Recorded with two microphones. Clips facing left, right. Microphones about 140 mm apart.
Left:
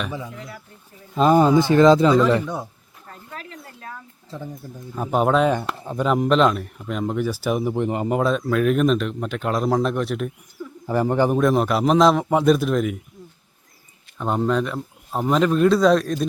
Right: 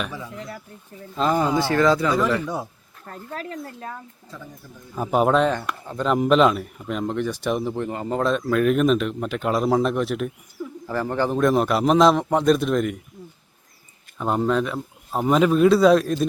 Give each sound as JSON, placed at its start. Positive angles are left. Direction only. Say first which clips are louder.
{"t": 1.1, "sound": "speech", "louder": "left 6 dB", "side_deg": 20}
{"t": 3.2, "sound": "speech", "louder": "right 7 dB", "side_deg": -40}
{"t": 4.3, "sound": "speech", "louder": "left 6 dB", "side_deg": 25}
{"t": 4.9, "sound": "a man's voice", "louder": "even", "side_deg": 0}
{"t": 5.6, "sound": "speech", "louder": "left 2 dB", "side_deg": 25}
{"t": 6.0, "sound": "a man's voice", "louder": "even", "side_deg": 0}
{"t": 8.2, "sound": "a man's voice", "louder": "right 2 dB", "side_deg": 0}
{"t": 10.8, "sound": "speech", "louder": "left 5 dB", "side_deg": 20}
{"t": 11.3, "sound": "a man's voice", "louder": "even", "side_deg": 0}
{"t": 14.2, "sound": "a man's voice", "louder": "even", "side_deg": 0}